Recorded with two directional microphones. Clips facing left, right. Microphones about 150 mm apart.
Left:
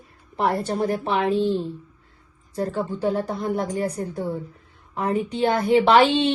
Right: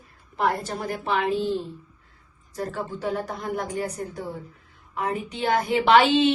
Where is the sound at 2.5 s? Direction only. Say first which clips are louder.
Left 5 dB; 30° left (ahead or behind).